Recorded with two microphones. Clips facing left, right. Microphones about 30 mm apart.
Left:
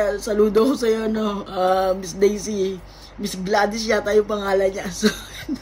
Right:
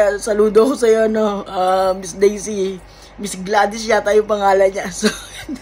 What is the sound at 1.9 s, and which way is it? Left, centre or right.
Speech, right.